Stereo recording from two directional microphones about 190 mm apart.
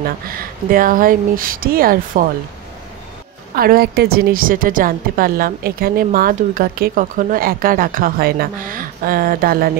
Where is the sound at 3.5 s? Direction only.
50° right (ahead or behind).